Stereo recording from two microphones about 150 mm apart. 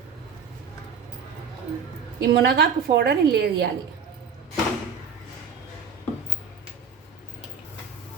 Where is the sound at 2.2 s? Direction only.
90° right.